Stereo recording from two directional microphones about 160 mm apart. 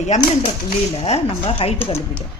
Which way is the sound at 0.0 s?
45° left (ahead or behind).